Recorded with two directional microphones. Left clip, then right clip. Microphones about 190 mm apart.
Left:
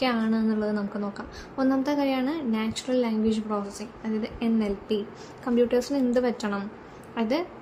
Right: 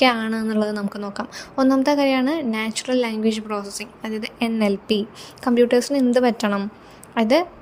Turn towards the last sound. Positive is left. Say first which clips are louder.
# right 9 dB
turn(degrees=-45)  # may be behind; listen again after turning